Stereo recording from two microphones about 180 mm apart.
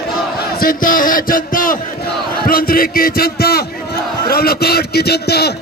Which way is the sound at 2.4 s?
55° left (ahead or behind).